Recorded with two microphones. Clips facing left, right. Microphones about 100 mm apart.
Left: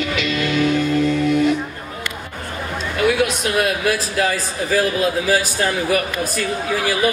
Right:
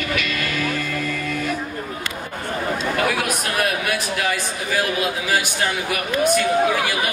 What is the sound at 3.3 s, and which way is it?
Speech, 25° left (ahead or behind).